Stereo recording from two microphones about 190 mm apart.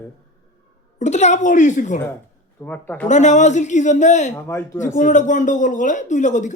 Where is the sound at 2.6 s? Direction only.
10° left (ahead or behind).